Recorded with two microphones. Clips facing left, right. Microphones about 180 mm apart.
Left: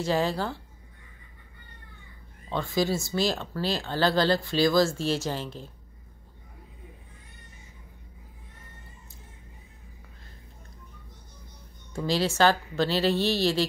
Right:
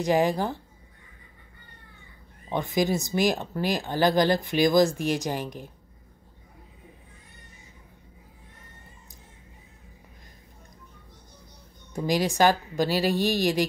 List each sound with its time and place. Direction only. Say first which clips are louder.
0.0 s speech: right 3 dB; 15° right (ahead or behind)
2.5 s speech: right 2 dB; 15° right (ahead or behind)
11.9 s speech: right 1 dB; 15° right (ahead or behind)